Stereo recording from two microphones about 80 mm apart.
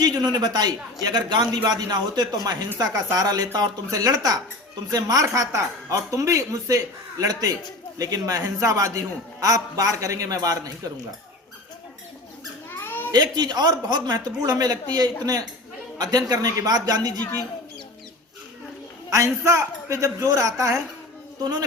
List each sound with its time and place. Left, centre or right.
0.0 s a man's voice: right
12.8 s cat: left
13.1 s a man's voice: right
19.1 s a man's voice: right